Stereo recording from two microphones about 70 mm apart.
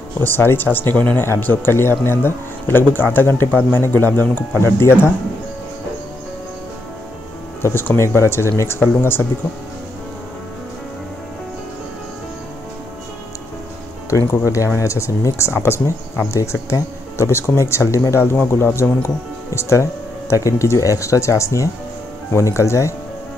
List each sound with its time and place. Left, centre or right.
0.2 s speech: left
4.6 s speech: left
7.6 s speech: left
14.1 s speech: left
16.3 s speech: left